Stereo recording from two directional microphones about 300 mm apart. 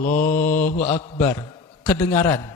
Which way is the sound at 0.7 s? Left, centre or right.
Left.